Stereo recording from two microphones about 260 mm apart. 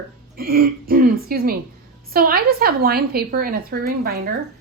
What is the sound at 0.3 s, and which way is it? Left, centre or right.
A woman's voice, right.